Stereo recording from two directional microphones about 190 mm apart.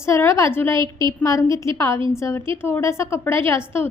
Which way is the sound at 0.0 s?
15° left (ahead or behind).